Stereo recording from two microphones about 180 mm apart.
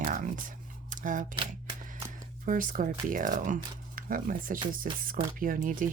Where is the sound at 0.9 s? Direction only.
45° right (ahead or behind).